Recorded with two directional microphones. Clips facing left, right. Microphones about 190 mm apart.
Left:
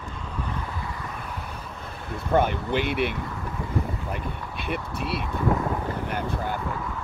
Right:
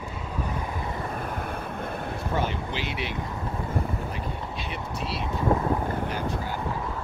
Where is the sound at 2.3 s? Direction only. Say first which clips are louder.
Left 8 dB; 55° left (ahead or behind).